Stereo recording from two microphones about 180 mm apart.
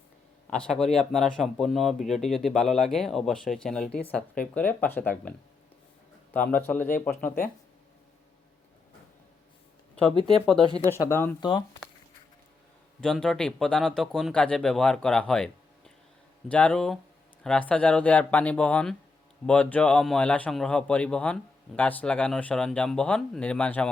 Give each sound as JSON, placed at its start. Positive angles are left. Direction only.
{"t": 0.5, "sound": "speech", "side_deg": 5}
{"t": 6.3, "sound": "speech", "side_deg": 10}
{"t": 10.3, "sound": "speech", "side_deg": 0}
{"t": 11.1, "sound": "speech", "side_deg": 10}
{"t": 11.3, "sound": "speech", "side_deg": 25}
{"t": 13.0, "sound": "speech", "side_deg": 5}
{"t": 16.5, "sound": "speech", "side_deg": 5}